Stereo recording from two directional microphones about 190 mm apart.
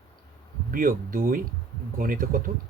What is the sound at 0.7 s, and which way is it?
Speech, 45° right (ahead or behind).